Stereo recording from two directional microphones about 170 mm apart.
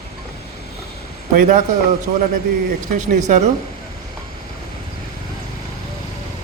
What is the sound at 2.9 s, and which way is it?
Speech, 45° right (ahead or behind).